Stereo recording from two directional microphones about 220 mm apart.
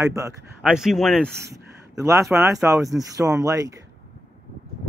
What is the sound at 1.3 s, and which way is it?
Speech, 50° right (ahead or behind).